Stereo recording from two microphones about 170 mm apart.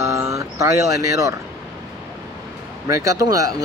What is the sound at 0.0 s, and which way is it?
Speech, 15° right (ahead or behind).